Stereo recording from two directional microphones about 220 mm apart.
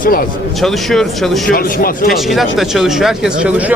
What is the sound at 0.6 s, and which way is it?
Speech, centre (ahead or behind).